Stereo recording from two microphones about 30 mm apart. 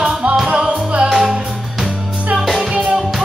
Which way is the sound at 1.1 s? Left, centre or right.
Centre.